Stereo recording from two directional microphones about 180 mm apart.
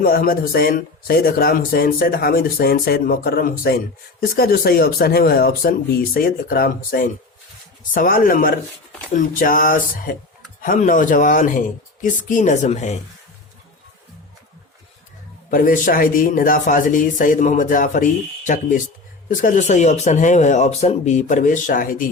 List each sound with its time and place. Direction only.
0.0 s a man's voice: 55° left (ahead or behind)
15.4 s a man's voice: 50° left (ahead or behind)